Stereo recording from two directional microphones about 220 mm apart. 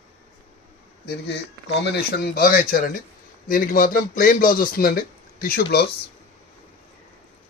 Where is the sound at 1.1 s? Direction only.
50° left (ahead or behind).